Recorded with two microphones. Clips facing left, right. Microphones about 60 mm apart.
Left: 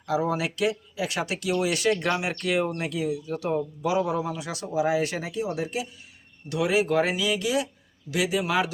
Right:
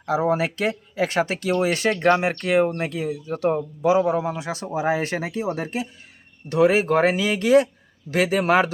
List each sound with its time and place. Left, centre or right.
0.0 s a man's voice: right